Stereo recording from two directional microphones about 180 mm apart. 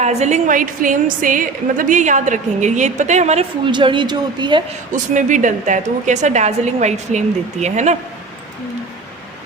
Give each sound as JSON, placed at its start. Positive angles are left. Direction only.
{"t": 0.0, "sound": "a woman's voice", "side_deg": -40}
{"t": 3.7, "sound": "speech", "side_deg": -25}
{"t": 4.9, "sound": "a woman's voice", "side_deg": -45}